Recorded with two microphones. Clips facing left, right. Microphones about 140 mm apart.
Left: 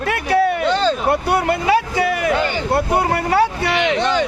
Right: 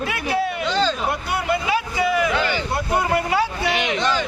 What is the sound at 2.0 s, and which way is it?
A man's voice, 50° left (ahead or behind).